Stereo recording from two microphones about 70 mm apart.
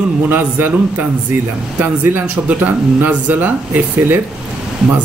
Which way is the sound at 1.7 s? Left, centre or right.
Right.